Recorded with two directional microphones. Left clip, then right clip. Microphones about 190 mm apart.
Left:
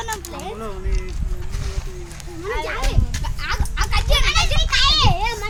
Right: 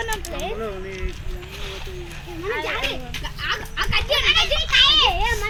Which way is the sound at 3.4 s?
Centre (ahead or behind).